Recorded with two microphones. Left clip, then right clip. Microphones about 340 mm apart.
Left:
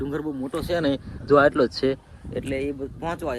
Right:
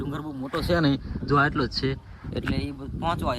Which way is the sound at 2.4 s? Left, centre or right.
Centre.